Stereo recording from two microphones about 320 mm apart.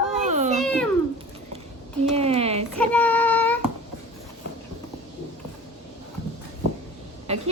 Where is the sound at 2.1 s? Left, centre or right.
Centre.